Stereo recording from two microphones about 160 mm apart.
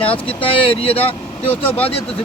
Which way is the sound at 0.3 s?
35° left (ahead or behind).